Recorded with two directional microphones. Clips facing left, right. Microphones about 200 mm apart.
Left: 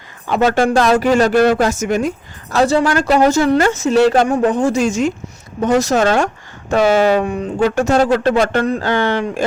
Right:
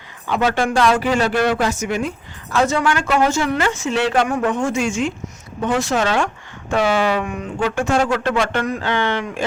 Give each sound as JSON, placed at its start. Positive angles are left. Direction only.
{"t": 0.3, "sound": "speech", "side_deg": 45}